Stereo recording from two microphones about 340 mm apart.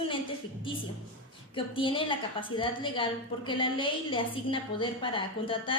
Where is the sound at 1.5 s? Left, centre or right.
Centre.